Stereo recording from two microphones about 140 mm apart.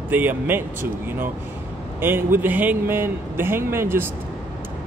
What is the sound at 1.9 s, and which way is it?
Speech, 15° right (ahead or behind).